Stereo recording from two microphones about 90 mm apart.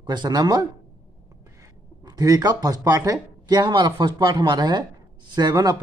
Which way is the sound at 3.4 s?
55° right (ahead or behind).